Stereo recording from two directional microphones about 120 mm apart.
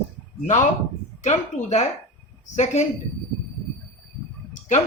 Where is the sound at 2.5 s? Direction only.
90° left.